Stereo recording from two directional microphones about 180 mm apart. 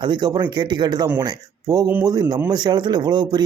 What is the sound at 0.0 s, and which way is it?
Speech, 25° right (ahead or behind).